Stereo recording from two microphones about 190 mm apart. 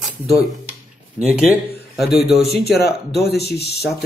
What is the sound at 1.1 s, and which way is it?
Speech, 5° right (ahead or behind).